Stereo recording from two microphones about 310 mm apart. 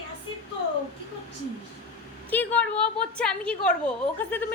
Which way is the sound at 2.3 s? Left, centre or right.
Centre.